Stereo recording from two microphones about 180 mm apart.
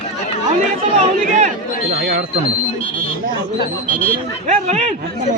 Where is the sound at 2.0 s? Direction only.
65° right (ahead or behind).